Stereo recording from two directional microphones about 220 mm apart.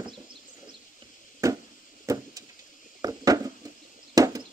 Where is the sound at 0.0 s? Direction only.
20° right (ahead or behind).